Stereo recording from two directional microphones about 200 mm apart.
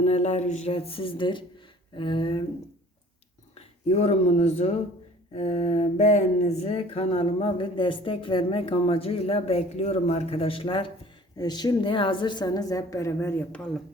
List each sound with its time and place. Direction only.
0.0 s speech: 35° left (ahead or behind)
3.5 s speech: 30° left (ahead or behind); by 13.6 s 15° left (ahead or behind)